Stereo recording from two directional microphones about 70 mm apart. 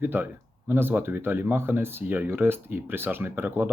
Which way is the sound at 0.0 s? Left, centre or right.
Right.